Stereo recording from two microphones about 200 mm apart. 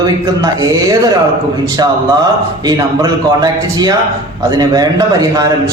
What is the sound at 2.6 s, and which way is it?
A man's voice, 20° right (ahead or behind).